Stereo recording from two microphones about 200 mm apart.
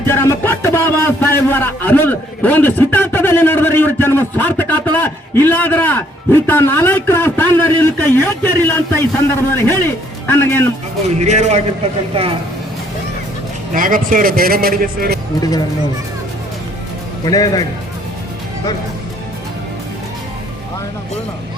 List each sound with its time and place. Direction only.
0.1 s a man's voice: 10° left (ahead or behind)
11.2 s a man's voice: 35° right (ahead or behind)
13.7 s a man's voice: 45° right (ahead or behind)
17.2 s a man's voice: 20° left (ahead or behind)